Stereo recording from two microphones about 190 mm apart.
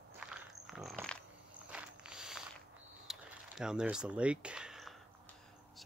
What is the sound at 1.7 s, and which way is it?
Mechanisms, 5° right (ahead or behind).